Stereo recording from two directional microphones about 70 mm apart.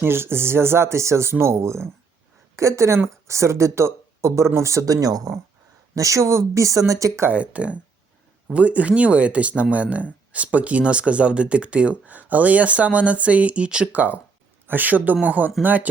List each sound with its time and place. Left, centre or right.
0.0 s speech: right
5.9 s speech: right
7.3 s speech: centre